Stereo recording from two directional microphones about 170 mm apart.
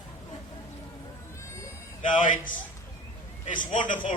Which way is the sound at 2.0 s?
50° left (ahead or behind).